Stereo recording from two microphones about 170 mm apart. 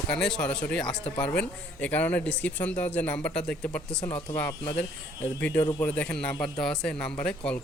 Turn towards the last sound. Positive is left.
turn(degrees=5)  # may be behind; listen again after turning